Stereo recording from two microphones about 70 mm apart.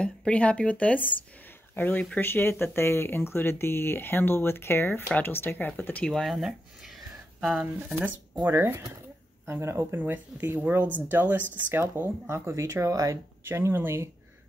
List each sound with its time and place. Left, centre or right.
0.0 s speech: centre
6.0 s speech: centre
8.5 s speech: right
9.9 s speech: right
12.3 s speech: right
13.5 s speech: right